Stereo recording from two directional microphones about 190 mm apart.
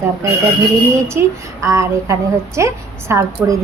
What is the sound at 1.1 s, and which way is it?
A woman's voice, 15° right (ahead or behind).